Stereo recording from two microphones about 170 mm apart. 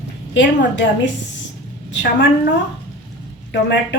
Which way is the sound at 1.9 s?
85° left.